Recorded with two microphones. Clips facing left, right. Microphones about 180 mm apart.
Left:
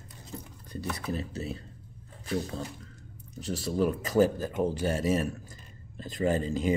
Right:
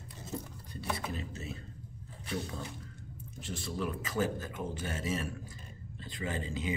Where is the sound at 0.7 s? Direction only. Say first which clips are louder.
Left 4 dB; 40° left (ahead or behind).